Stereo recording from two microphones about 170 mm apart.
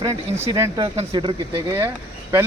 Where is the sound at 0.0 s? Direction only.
20° right (ahead or behind).